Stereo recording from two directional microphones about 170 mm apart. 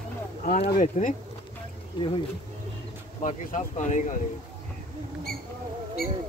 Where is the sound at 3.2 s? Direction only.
45° left (ahead or behind).